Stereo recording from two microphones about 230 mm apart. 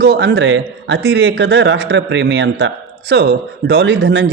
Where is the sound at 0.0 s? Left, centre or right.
Right.